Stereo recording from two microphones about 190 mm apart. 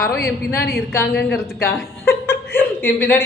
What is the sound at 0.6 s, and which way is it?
Speech, 55° left (ahead or behind).